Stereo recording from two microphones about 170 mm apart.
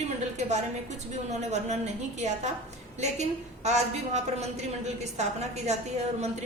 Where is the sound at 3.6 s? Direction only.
40° right (ahead or behind).